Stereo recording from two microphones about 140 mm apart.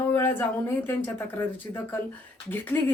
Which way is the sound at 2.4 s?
15° left (ahead or behind).